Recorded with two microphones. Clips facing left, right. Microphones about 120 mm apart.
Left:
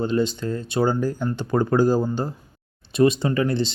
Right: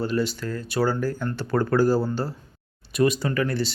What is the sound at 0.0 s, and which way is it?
Speech, 20° left (ahead or behind).